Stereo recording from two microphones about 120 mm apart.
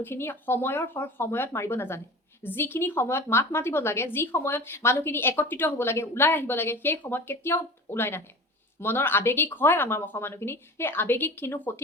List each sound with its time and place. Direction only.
0.0 s a woman's voice: 20° left (ahead or behind)